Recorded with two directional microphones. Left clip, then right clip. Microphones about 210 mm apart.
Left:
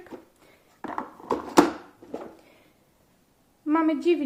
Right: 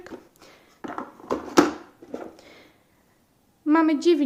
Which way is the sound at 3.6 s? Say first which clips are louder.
Right 4 dB; 35° right (ahead or behind).